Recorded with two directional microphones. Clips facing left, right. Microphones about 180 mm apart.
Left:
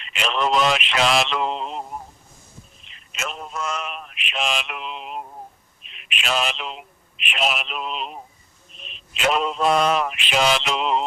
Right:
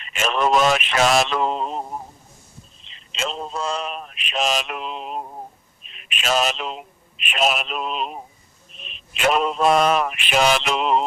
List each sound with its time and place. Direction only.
0.1 s mantra: 45° right (ahead or behind)
2.9 s a man's voice: 25° right (ahead or behind); by 8.2 s 45° right (ahead or behind)
8.9 s mantra: 55° right (ahead or behind)